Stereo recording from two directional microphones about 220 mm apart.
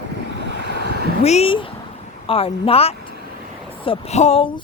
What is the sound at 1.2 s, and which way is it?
Speech, 30° left (ahead or behind).